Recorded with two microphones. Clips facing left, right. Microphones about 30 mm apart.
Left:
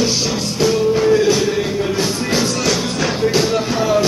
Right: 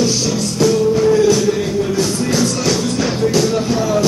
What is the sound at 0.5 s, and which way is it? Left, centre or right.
Music, centre.